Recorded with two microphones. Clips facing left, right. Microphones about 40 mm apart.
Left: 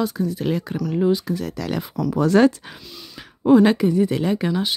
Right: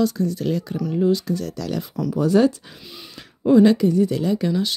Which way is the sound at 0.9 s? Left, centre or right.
Left.